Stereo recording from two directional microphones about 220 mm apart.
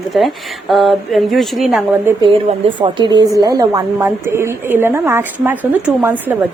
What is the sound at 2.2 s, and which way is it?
A woman's voice, 20° right (ahead or behind).